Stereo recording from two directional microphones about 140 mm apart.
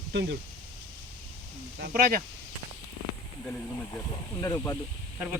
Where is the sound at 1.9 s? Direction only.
80° right.